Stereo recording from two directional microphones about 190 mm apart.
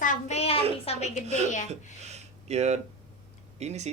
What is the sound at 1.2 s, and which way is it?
Speech, 35° right (ahead or behind).